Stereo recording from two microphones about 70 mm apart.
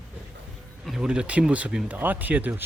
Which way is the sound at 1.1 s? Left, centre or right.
Centre.